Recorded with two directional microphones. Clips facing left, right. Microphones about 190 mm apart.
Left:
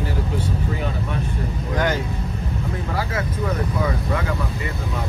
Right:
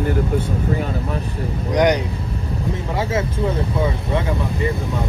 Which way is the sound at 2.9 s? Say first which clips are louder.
Right 5 dB; 25° right (ahead or behind).